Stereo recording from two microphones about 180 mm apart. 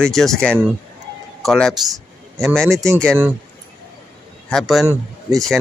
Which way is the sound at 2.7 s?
15° right (ahead or behind).